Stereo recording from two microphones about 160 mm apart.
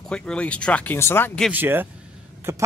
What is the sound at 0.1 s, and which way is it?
Speech, 5° left (ahead or behind).